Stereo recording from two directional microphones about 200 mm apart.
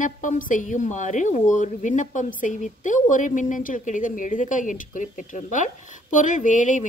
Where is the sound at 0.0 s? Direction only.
40° left (ahead or behind).